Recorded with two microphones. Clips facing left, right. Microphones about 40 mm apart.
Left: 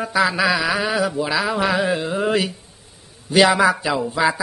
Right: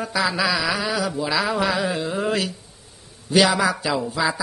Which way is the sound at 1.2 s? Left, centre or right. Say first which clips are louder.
Left 1 dB; centre.